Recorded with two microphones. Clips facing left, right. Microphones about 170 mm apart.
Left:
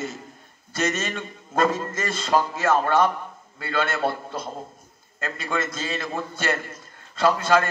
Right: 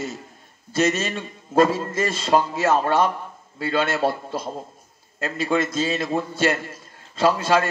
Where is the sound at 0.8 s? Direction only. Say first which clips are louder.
Right 3 dB; 30° right (ahead or behind).